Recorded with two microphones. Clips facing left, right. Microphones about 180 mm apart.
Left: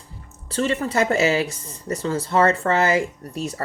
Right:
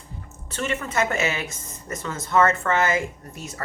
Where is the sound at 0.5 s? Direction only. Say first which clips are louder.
Left 5 dB; 35° left (ahead or behind).